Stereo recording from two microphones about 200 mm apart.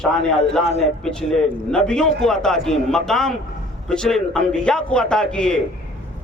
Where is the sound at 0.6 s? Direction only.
35° left (ahead or behind).